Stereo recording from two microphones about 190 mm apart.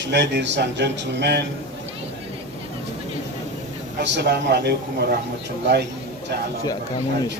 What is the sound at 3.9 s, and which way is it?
A man's voice, 65° right (ahead or behind).